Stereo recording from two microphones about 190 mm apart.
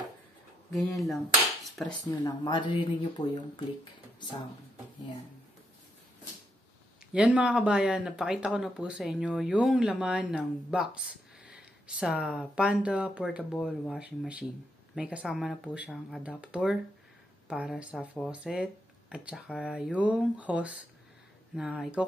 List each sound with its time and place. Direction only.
0.7 s speech: centre (ahead or behind)
1.6 s dishes: 5° left (ahead or behind)
2.2 s speech: 25° left (ahead or behind)
7.1 s speech: 5° right (ahead or behind)
13.4 s speech: 5° left (ahead or behind)